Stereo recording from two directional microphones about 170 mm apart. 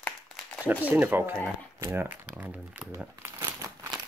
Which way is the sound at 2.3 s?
5° right (ahead or behind).